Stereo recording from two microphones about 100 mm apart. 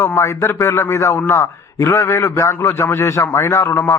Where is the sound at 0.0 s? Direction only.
25° left (ahead or behind).